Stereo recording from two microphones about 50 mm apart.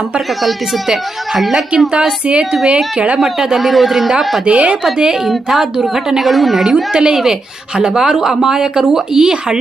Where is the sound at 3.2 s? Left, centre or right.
Centre.